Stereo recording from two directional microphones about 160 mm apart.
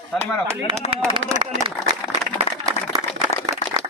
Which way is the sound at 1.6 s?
35° right (ahead or behind).